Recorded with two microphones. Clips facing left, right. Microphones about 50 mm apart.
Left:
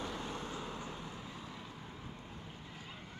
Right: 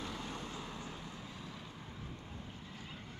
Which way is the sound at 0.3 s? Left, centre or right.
Left.